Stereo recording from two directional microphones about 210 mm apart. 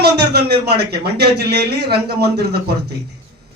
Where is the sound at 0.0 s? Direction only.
50° right (ahead or behind).